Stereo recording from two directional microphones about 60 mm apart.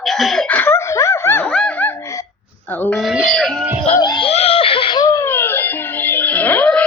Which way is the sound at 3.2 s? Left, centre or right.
Centre.